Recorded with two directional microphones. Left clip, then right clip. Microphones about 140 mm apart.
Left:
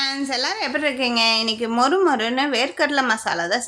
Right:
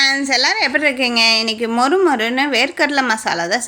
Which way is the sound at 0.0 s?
30° right (ahead or behind).